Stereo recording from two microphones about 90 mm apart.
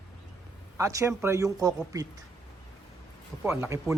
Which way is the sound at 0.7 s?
35° right (ahead or behind).